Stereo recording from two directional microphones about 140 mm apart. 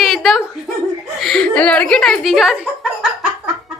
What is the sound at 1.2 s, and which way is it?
A woman's voice, 5° left (ahead or behind).